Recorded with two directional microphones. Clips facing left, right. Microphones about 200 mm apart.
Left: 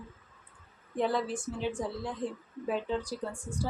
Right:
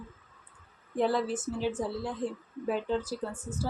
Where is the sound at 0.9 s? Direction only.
5° right (ahead or behind).